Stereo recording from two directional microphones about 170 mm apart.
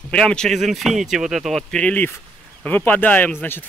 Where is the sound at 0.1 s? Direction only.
5° left (ahead or behind).